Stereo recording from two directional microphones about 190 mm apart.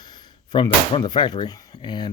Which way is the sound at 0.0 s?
20° left (ahead or behind).